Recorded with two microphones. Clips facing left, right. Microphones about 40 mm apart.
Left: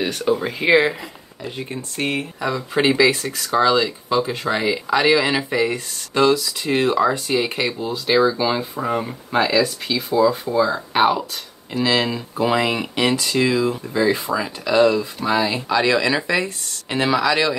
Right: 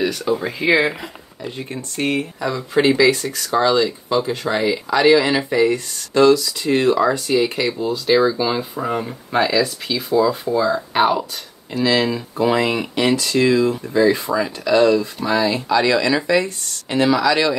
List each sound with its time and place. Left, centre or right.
0.0 s speech: left
0.7 s speech: right
1.4 s speech: centre